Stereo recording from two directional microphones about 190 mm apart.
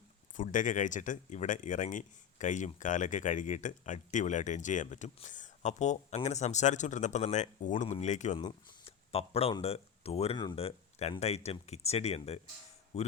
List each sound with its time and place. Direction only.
0.3 s speech: 40° left (ahead or behind)
8.4 s speech: 25° left (ahead or behind)